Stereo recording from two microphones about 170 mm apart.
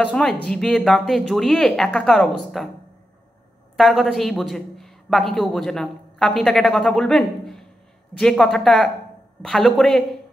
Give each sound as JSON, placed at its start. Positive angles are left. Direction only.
{"t": 0.0, "sound": "speech", "side_deg": 5}
{"t": 3.7, "sound": "speech", "side_deg": 0}